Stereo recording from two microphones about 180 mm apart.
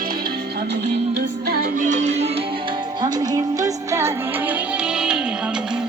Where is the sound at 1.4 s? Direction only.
55° right (ahead or behind); by 2.4 s 35° right (ahead or behind).